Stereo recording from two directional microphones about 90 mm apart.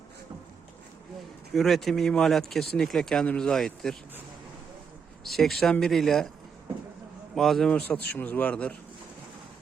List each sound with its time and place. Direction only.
1.5 s speech: centre (ahead or behind)
5.2 s speech: centre (ahead or behind)
7.3 s speech: 5° left (ahead or behind)
7.7 s speech: 15° left (ahead or behind)